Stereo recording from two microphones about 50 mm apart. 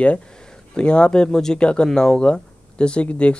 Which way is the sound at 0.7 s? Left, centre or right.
Centre.